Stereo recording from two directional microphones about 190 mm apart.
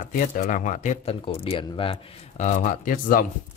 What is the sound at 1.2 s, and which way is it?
Speech, 30° left (ahead or behind).